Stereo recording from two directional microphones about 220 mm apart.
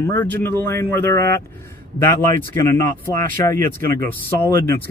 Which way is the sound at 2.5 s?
10° left (ahead or behind).